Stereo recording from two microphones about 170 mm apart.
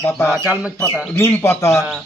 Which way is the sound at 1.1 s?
15° left (ahead or behind).